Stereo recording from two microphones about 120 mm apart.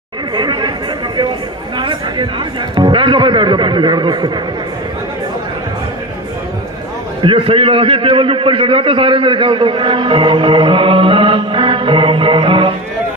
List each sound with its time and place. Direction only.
0.4 s chatter: 40° right (ahead or behind)
1.8 s a man's voice: 40° right (ahead or behind)
7.3 s a man's voice: 55° right (ahead or behind)